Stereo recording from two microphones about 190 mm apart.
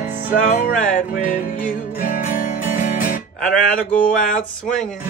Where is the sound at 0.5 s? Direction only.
40° left (ahead or behind).